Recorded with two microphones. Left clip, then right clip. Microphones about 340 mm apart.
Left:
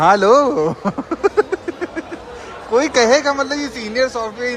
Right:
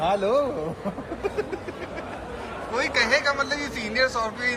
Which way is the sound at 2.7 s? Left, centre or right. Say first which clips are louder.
Left 9 dB; centre.